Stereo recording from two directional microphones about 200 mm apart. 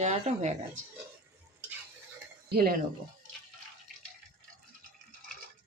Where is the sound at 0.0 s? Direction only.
35° right (ahead or behind).